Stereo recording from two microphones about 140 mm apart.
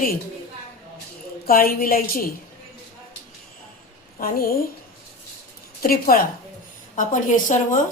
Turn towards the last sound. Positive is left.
turn(degrees=65)  # may be behind; listen again after turning